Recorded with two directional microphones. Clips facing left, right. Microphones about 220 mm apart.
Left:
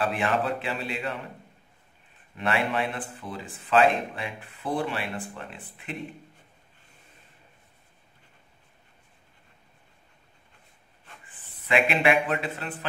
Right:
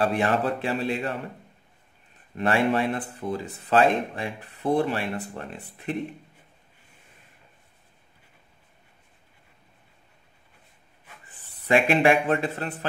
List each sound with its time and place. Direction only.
0.0 s speech: 40° right (ahead or behind)
2.3 s speech: 40° right (ahead or behind)
11.6 s speech: 40° right (ahead or behind)